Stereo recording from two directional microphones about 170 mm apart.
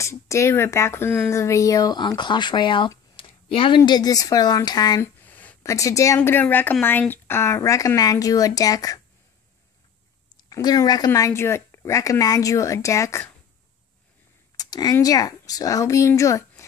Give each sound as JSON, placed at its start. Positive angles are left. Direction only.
{"t": 0.0, "sound": "speech", "side_deg": 15}
{"t": 5.2, "sound": "a woman's voice", "side_deg": 10}
{"t": 10.3, "sound": "speech", "side_deg": 25}
{"t": 14.6, "sound": "speech", "side_deg": 20}